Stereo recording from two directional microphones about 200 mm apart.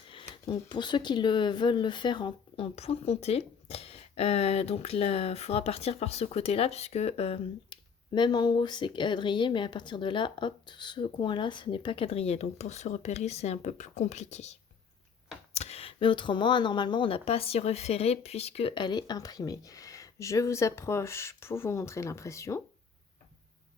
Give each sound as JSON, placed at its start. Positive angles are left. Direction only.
{"t": 0.1, "sound": "speech", "side_deg": 25}